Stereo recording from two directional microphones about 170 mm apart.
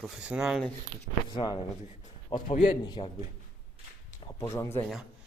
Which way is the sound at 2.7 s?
25° left (ahead or behind).